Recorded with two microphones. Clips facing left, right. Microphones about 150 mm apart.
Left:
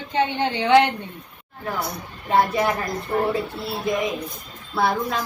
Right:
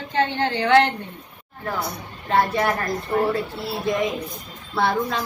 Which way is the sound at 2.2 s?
10° left (ahead or behind).